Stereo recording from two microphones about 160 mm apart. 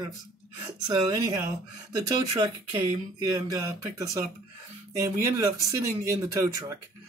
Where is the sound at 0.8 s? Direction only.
25° right (ahead or behind).